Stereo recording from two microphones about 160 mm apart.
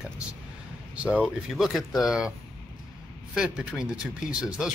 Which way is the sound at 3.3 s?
5° right (ahead or behind).